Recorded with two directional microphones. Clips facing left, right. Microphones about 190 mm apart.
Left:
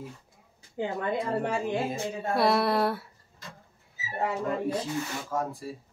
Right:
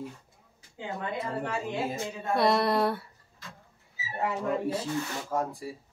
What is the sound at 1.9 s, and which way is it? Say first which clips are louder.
A woman's voice: left 1 dB; 5° left (ahead or behind).